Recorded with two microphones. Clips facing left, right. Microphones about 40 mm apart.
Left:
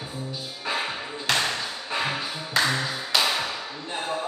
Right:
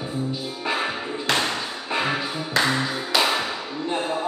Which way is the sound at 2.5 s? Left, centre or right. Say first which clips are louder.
Right 2 dB; centre.